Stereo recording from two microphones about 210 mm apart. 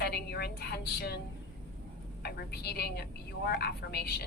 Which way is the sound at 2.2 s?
50° left (ahead or behind).